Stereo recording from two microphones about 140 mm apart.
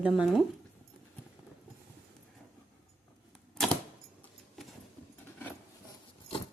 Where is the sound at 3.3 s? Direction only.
5° left (ahead or behind).